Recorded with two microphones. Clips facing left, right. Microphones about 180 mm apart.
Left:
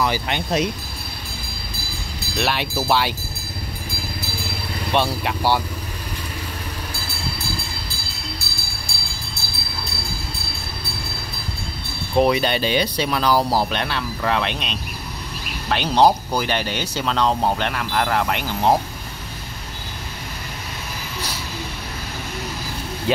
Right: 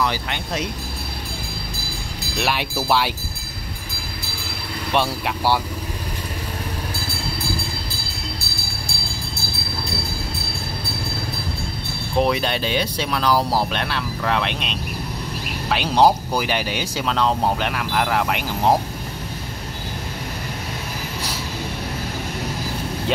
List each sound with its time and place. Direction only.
0.3 s speech: 20° left (ahead or behind)
2.3 s speech: 10° right (ahead or behind)
4.9 s speech: 5° right (ahead or behind)
12.2 s speech: centre (ahead or behind)
23.1 s speech: 5° left (ahead or behind)